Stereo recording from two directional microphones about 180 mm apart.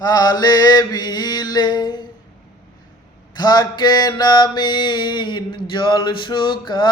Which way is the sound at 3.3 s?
25° left (ahead or behind).